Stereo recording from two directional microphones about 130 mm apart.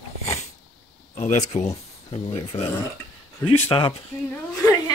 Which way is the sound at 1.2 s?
65° left (ahead or behind).